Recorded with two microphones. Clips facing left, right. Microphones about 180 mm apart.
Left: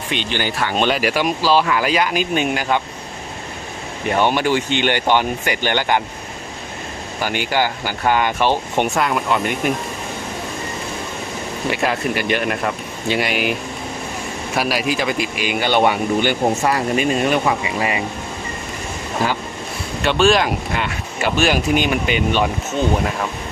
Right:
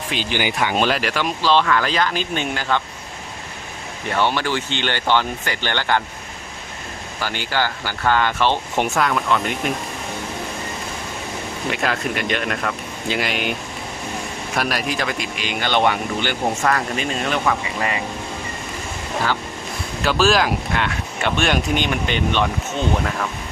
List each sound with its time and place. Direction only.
0.1 s speech: 5° right (ahead or behind)
0.8 s speech: centre (ahead or behind)
4.1 s speech: 15° left (ahead or behind)
7.2 s speech: 15° left (ahead or behind)
8.7 s speech: centre (ahead or behind)
11.7 s speech: 5° left (ahead or behind)
20.0 s speech: centre (ahead or behind)